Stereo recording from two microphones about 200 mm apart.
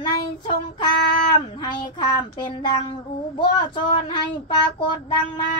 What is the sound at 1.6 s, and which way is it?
Speech, 20° left (ahead or behind).